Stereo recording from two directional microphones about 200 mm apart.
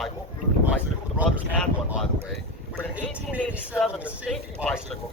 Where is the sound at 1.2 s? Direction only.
5° right (ahead or behind).